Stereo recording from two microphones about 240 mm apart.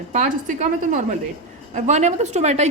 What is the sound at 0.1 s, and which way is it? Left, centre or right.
Speech, right.